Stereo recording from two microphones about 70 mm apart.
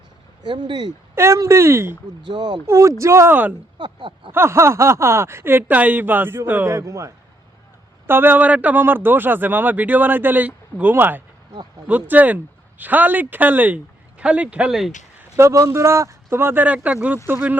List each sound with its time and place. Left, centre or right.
0.4 s speech: right
1.1 s speech: right
2.3 s speech: right
2.6 s speech: right
3.8 s speech: right
4.3 s speech: right
6.7 s speech: right
8.0 s speech: right
14.7 s speech: centre
15.4 s speech: right
16.6 s speech: right